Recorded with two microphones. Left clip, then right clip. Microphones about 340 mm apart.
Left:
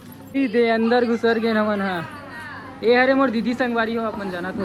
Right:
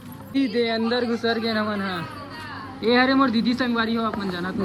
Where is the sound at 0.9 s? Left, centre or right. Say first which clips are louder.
Left 5 dB; left.